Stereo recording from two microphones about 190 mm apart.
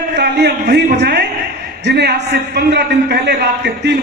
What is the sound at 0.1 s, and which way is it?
A man's voice, 60° right (ahead or behind).